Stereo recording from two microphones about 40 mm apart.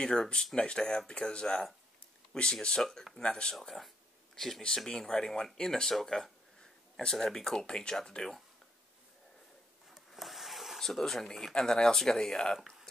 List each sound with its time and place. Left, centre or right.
0.0 s speech: centre
3.2 s speech: left
3.6 s speech: centre
7.6 s speech: left
9.9 s a sound: centre
10.8 s speech: centre
12.5 s speech: centre